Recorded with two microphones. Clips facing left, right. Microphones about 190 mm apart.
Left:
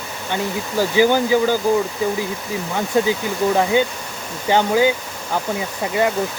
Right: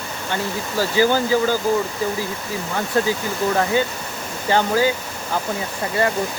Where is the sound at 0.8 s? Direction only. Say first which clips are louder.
Left 2 dB; 15° left (ahead or behind).